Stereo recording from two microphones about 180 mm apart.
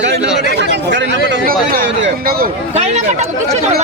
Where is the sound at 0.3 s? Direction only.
75° right (ahead or behind).